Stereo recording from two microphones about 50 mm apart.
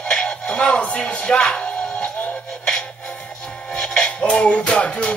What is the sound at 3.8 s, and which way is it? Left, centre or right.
Music, centre.